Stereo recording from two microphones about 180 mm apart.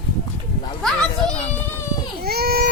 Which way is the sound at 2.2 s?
60° right (ahead or behind).